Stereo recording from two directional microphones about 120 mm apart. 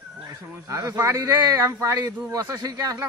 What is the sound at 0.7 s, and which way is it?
Speech, 25° right (ahead or behind).